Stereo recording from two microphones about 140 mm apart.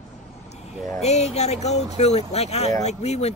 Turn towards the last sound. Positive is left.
turn(degrees=50)  # may be behind; listen again after turning